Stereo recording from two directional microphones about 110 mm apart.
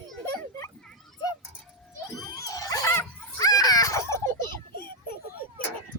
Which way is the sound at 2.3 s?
35° left (ahead or behind).